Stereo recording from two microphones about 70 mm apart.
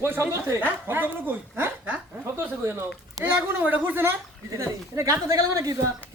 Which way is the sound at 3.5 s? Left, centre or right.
Right.